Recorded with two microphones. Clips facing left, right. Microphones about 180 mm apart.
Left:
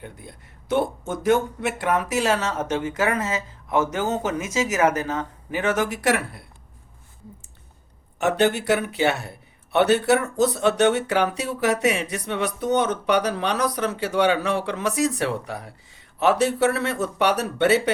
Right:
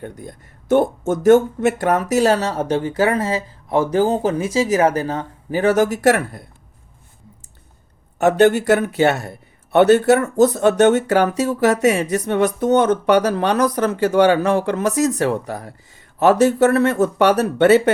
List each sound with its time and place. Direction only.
0.0 s speech: 45° right (ahead or behind)
8.2 s speech: 45° right (ahead or behind)